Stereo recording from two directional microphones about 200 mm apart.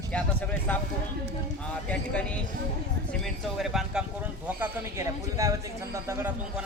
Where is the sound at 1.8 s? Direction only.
5° left (ahead or behind).